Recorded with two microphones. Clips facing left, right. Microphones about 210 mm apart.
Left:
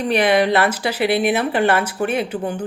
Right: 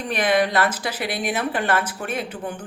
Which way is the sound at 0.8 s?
65° left (ahead or behind).